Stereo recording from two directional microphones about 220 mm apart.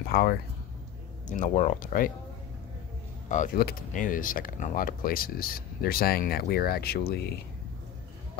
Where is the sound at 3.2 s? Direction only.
35° left (ahead or behind).